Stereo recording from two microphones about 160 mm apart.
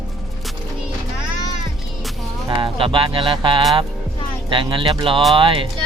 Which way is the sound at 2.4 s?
30° right (ahead or behind).